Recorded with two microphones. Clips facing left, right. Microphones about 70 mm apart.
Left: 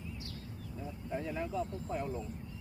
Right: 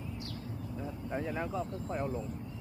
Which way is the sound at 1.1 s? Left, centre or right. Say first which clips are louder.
Right 1 dB; right.